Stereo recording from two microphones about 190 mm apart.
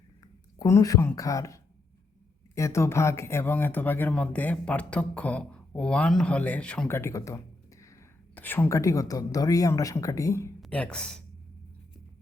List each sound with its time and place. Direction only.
0.6 s speech: 15° left (ahead or behind)
10.6 s speech: 5° left (ahead or behind)